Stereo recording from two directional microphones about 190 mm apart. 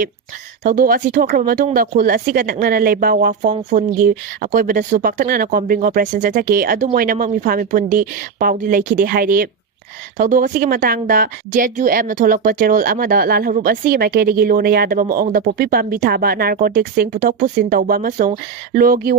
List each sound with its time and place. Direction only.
0.6 s a woman's voice: 45° right (ahead or behind)